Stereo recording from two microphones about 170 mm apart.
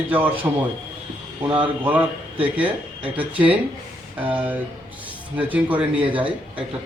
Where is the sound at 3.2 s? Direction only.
10° right (ahead or behind).